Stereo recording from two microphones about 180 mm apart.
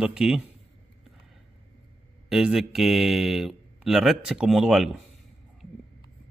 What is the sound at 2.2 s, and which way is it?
Speech, centre (ahead or behind).